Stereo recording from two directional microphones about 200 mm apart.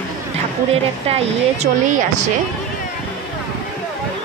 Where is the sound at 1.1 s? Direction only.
35° right (ahead or behind).